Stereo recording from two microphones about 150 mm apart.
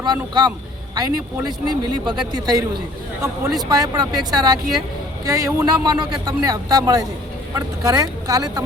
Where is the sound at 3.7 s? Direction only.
25° right (ahead or behind).